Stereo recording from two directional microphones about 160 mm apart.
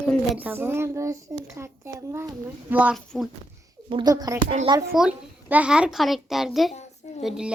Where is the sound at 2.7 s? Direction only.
10° right (ahead or behind).